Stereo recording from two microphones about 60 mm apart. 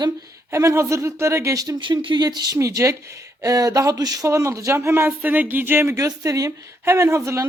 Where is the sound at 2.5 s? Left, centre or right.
Right.